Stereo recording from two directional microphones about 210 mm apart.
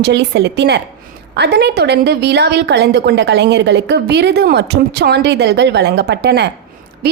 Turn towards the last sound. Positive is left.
turn(degrees=-50)  # may be behind; listen again after turning